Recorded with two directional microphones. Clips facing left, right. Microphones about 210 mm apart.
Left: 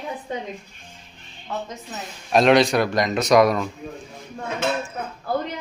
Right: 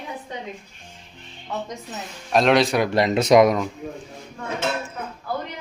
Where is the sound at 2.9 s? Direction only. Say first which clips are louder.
Right 5 dB; 30° right (ahead or behind).